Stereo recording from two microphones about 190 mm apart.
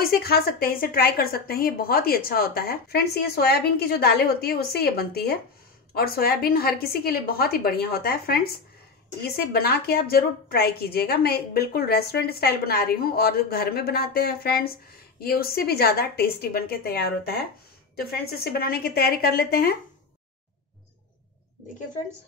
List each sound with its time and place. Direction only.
0.0 s a woman's voice: 55° left (ahead or behind)